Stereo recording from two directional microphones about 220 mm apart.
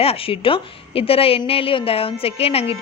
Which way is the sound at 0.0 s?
25° left (ahead or behind).